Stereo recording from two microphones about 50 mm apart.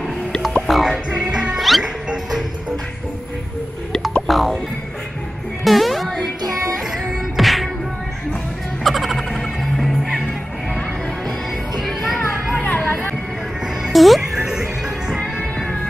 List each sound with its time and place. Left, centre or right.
0.6 s music: centre
1.1 s music: right
1.6 s music: centre
4.3 s music: centre
5.6 s music: centre
8.8 s music: centre
11.8 s music: centre
12.6 s music: left
13.9 s music: centre
14.4 s music: centre